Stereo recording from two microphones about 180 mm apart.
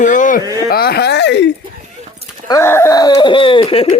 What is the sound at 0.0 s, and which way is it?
Speech, 45° left (ahead or behind).